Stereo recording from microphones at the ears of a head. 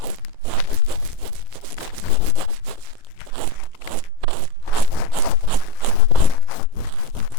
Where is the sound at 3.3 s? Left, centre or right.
Right.